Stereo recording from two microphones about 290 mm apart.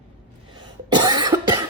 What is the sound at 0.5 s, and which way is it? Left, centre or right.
Cough, centre.